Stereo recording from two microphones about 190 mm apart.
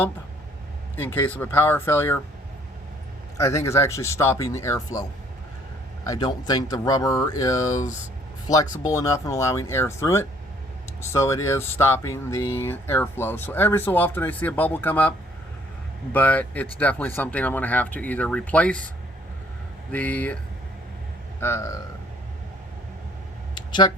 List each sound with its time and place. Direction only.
0.9 s speech: 10° left (ahead or behind)
3.3 s speech: 15° left (ahead or behind)
6.1 s speech: 20° left (ahead or behind)
16.1 s speech: 10° left (ahead or behind)
19.9 s speech: 10° left (ahead or behind)
21.4 s speech: 15° left (ahead or behind)
23.6 s a sound: 25° left (ahead or behind)